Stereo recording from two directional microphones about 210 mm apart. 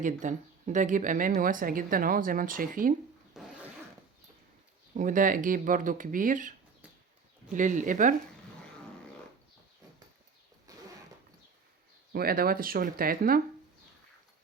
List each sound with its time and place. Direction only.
0.0 s speech: 35° right (ahead or behind)
3.3 s zipper: centre (ahead or behind)
4.9 s speech: 40° right (ahead or behind)
7.5 s speech: 35° right (ahead or behind)
12.1 s speech: 45° right (ahead or behind)